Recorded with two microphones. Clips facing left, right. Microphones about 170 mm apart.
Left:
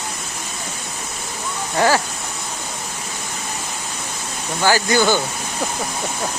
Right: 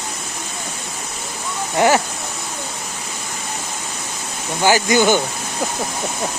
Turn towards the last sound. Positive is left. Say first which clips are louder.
# right 2 dB
turn(degrees=-20)  # may be behind; listen again after turning